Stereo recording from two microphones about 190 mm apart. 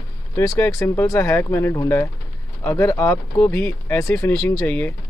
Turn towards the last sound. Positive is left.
turn(degrees=10)  # may be behind; listen again after turning